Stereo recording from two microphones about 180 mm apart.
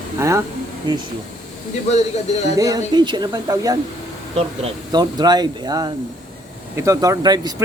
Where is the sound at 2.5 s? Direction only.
20° right (ahead or behind).